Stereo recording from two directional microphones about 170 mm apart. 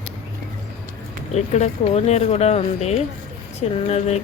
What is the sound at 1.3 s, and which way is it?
Speech, 40° left (ahead or behind).